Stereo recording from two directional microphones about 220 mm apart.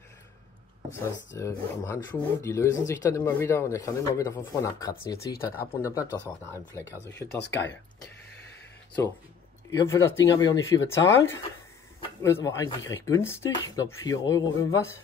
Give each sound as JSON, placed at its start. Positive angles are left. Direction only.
{"t": 0.9, "sound": "speech", "side_deg": 10}
{"t": 7.2, "sound": "speech", "side_deg": 50}
{"t": 9.7, "sound": "speech", "side_deg": 15}